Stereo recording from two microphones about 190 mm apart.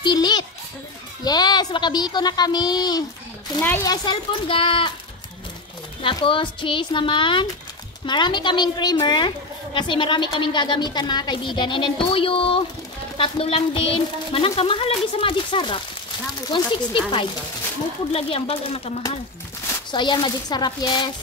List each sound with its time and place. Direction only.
0.0 s a sound: 25° left (ahead or behind)
1.2 s a woman's voice: 20° left (ahead or behind)
6.0 s a woman's voice: 25° left (ahead or behind)